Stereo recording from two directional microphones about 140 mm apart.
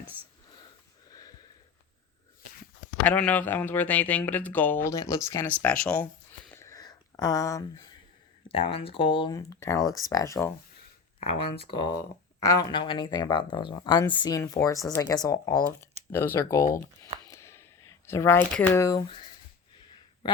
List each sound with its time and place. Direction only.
0.1 s speech: 15° right (ahead or behind)
3.0 s speech: 10° left (ahead or behind)
5.5 s a sound: 10° left (ahead or behind); by 7.9 s 25° left (ahead or behind)
8.4 s speech: 40° left (ahead or behind)
9.3 s speech: 20° left (ahead or behind)
11.2 s speech: 45° left (ahead or behind)
11.9 s speech: 25° left (ahead or behind)
16.1 s speech: 15° left (ahead or behind)
17.2 s a sound: 20° left (ahead or behind)
18.5 s speech: 15° left (ahead or behind)
19.0 s speech: 35° left (ahead or behind)